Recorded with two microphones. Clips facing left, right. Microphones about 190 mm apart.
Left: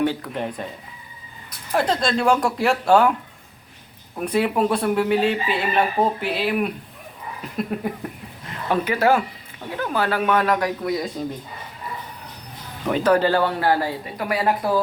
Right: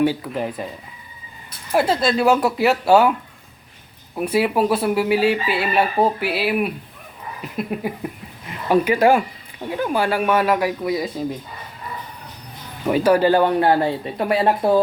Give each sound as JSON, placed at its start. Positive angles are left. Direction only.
{"t": 0.0, "sound": "speech", "side_deg": -5}
{"t": 1.7, "sound": "speech", "side_deg": -5}
{"t": 4.2, "sound": "speech", "side_deg": -5}
{"t": 12.8, "sound": "speech", "side_deg": -10}